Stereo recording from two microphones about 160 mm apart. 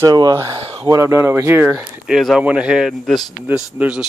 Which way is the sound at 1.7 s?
5° right (ahead or behind).